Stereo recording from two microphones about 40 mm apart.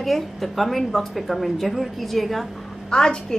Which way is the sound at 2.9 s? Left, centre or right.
Centre.